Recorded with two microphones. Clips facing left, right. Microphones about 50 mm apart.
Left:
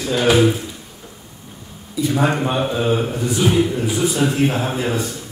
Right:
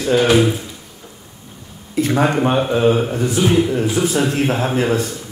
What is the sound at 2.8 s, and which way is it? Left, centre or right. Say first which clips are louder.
Speech: right 4 dB; centre.